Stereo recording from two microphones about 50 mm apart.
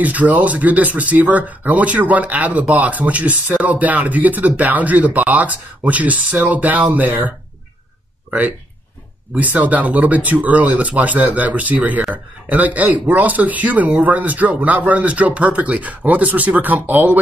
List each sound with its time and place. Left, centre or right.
0.0 s speech: right